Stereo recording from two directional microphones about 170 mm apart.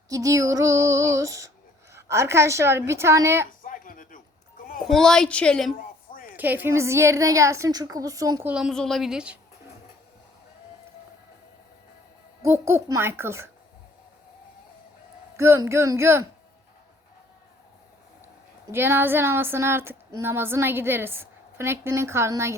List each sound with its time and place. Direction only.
0.1 s female singing: 20° right (ahead or behind)
1.9 s speech: 15° right (ahead or behind)
3.6 s a sound: 55° left (ahead or behind)
4.8 s a woman's voice: centre (ahead or behind)
6.1 s a sound: 55° left (ahead or behind)
6.3 s speech: 10° right (ahead or behind)
8.4 s a woman's voice: 5° right (ahead or behind)
12.4 s speech: 15° right (ahead or behind)
15.4 s speech: 15° right (ahead or behind)
18.7 s speech: 15° right (ahead or behind)